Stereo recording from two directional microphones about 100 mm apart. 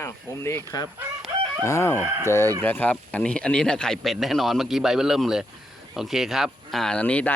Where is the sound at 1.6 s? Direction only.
30° left (ahead or behind).